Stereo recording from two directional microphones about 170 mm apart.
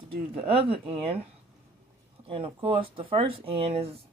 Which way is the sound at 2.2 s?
35° right (ahead or behind).